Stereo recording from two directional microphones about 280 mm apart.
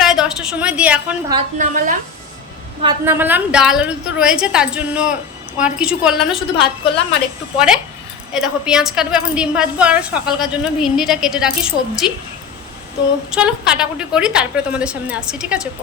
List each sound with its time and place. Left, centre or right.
0.0 s a woman's voice: centre
1.4 s a woman's voice: right
2.8 s a woman's voice: centre
8.3 s a woman's voice: centre
13.3 s a woman's voice: centre